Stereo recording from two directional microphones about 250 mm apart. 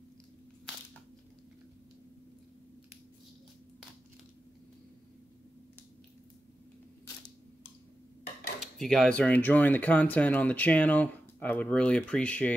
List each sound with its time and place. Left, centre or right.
8.5 s speech: centre